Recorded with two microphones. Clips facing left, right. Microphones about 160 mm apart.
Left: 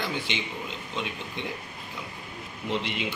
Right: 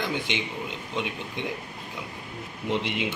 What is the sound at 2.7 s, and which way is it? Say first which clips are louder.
Speech: right 2 dB; 15° right (ahead or behind).